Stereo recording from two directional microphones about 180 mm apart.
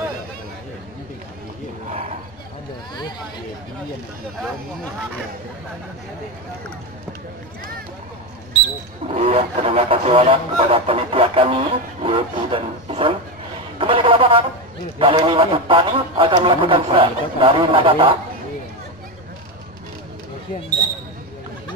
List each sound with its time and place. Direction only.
9.0 s a man's voice: 35° right (ahead or behind)